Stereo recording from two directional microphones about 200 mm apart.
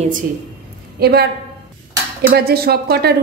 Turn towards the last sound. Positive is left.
turn(degrees=-50)  # may be behind; listen again after turning